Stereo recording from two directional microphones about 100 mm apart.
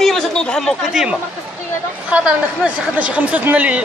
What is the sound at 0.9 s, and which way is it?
Speech, 5° right (ahead or behind).